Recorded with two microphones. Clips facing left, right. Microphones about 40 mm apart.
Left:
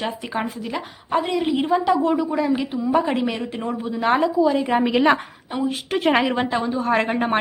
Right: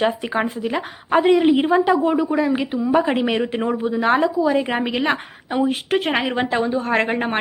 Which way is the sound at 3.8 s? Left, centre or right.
Centre.